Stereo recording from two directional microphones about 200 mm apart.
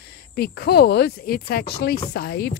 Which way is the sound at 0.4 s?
50° left (ahead or behind).